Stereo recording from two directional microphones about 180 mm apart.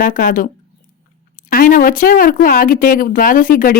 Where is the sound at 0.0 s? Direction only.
50° left (ahead or behind).